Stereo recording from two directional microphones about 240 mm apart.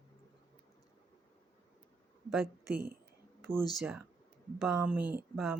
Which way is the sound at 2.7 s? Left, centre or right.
Right.